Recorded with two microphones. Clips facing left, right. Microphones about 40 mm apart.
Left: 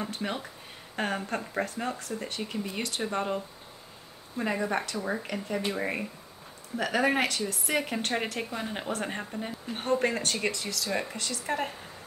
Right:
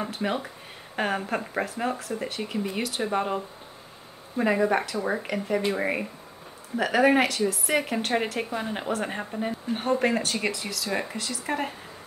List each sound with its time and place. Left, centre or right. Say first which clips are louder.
0.2 s a woman's voice: right 5 dB; centre
4.4 s a woman's voice: right 6 dB; centre